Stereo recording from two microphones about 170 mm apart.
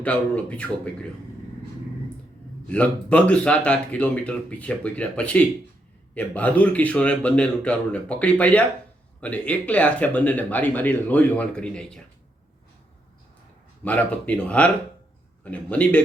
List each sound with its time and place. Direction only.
0.0 s speech: 10° left (ahead or behind)
2.6 s speech: 5° left (ahead or behind)
13.8 s speech: 10° left (ahead or behind)